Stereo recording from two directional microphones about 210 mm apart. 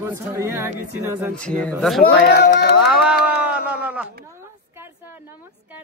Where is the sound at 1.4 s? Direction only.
5° left (ahead or behind).